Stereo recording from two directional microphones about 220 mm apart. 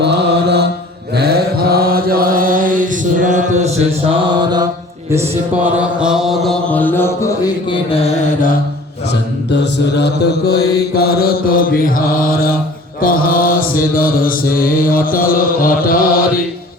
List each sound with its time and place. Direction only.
0.0 s mantra: 50° right (ahead or behind)
3.8 s mantra: 20° right (ahead or behind)
5.7 s mantra: 5° right (ahead or behind); by 8.1 s 25° left (ahead or behind)
9.7 s mantra: 50° left (ahead or behind)